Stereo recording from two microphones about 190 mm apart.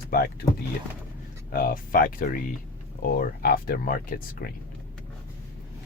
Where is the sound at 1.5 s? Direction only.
50° left (ahead or behind).